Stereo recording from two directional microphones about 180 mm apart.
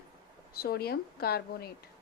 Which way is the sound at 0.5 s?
60° left (ahead or behind).